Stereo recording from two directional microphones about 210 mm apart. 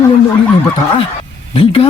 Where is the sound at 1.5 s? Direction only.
25° left (ahead or behind).